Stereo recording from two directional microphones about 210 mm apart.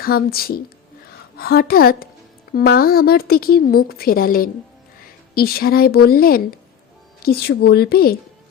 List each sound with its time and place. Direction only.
0.0 s speech: 45° left (ahead or behind)